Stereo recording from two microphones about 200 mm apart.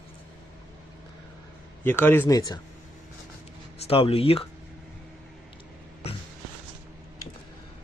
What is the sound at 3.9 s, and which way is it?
Speech, 30° left (ahead or behind).